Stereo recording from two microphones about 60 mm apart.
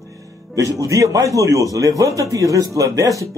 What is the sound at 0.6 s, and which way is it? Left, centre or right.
A man's voice, right.